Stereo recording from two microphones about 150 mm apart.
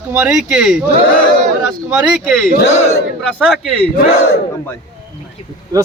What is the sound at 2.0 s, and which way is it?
Speech, 5° right (ahead or behind).